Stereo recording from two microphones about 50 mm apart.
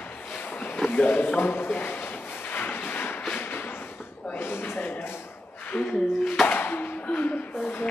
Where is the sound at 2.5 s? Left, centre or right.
Left.